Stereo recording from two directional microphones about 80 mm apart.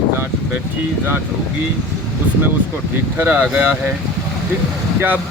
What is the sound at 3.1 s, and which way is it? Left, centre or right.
Speech, right.